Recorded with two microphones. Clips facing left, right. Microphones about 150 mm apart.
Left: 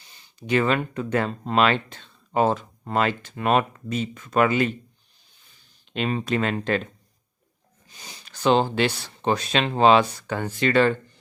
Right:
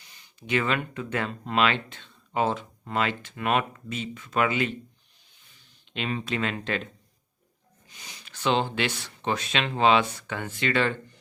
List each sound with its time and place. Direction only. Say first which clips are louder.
0.0 s speech: left 5 dB; 30° left (ahead or behind)
5.9 s speech: left 5 dB; 40° left (ahead or behind)
7.9 s speech: left 3 dB; 35° left (ahead or behind)